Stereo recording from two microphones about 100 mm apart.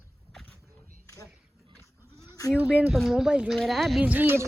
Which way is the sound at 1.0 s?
30° left (ahead or behind).